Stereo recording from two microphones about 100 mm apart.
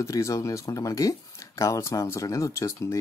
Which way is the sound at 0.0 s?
35° left (ahead or behind).